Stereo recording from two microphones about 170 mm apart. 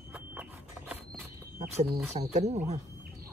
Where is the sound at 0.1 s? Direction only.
10° right (ahead or behind).